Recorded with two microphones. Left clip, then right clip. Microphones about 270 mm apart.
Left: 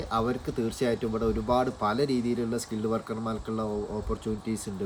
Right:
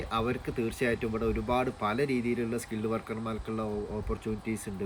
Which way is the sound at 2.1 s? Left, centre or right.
Left.